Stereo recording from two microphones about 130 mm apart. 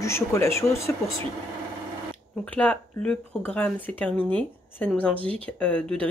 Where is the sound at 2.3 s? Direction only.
10° left (ahead or behind).